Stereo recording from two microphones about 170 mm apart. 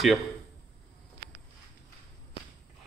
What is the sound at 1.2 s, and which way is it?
Walk, 60° right (ahead or behind).